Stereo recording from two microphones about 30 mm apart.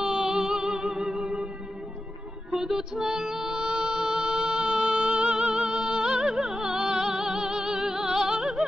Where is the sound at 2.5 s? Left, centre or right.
Centre.